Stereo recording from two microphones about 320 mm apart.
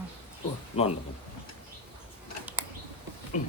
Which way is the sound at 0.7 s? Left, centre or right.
Centre.